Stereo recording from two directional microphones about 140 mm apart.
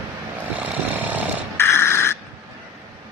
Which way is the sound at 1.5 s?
20° left (ahead or behind).